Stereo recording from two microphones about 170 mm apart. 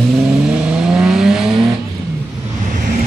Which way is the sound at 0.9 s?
5° right (ahead or behind).